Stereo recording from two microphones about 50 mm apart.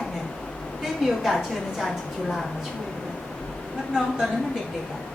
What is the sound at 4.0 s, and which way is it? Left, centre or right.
Speech, centre.